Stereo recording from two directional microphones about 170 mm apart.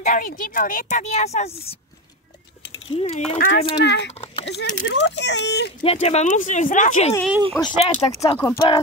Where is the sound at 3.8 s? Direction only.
90° left.